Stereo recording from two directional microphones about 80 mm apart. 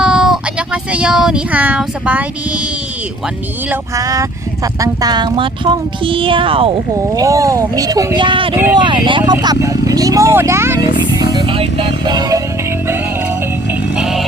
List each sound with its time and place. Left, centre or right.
0.0 s a sound: centre
3.9 s speech: right
7.2 s speech: right
8.2 s speech: right
9.3 s music: right
9.6 s speech: right
10.8 s music: right
11.4 s music: right
13.9 s music: centre